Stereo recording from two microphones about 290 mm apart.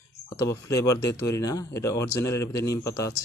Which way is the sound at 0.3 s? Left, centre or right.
Centre.